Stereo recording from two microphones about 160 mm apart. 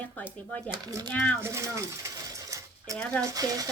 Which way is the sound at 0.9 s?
25° right (ahead or behind).